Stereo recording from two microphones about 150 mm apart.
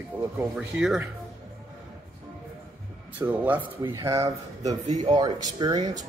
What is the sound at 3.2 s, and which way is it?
Speech, 10° right (ahead or behind).